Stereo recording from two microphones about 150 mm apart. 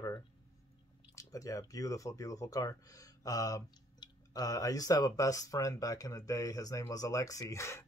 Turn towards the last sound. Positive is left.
turn(degrees=20)  # may be behind; listen again after turning